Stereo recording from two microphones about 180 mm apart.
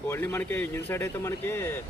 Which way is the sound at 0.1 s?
15° left (ahead or behind).